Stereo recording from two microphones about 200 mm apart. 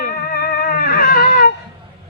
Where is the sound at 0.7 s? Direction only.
45° left (ahead or behind).